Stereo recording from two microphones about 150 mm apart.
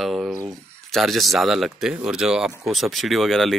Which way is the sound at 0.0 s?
5° right (ahead or behind).